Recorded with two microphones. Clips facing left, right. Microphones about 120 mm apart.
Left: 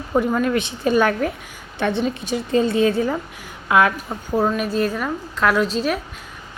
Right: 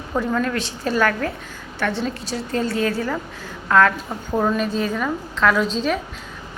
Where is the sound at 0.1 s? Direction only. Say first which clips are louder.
Left 3 dB; 20° left (ahead or behind).